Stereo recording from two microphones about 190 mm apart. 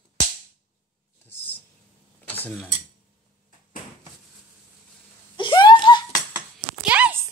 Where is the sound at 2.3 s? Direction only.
10° left (ahead or behind).